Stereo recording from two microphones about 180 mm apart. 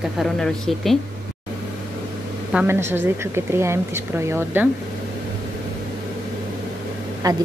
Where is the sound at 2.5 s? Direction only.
10° right (ahead or behind).